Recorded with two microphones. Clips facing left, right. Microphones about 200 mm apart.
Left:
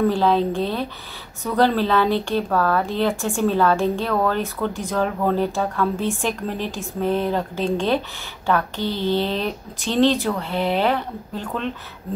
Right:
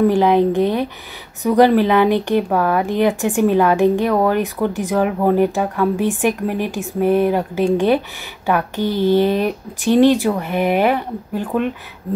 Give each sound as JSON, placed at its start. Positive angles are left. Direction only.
{"t": 0.0, "sound": "speech", "side_deg": -15}